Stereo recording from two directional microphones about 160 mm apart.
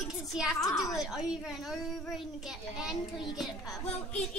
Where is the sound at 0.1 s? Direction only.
Centre (ahead or behind).